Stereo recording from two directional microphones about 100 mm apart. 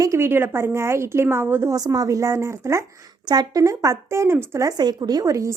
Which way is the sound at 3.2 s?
45° right (ahead or behind).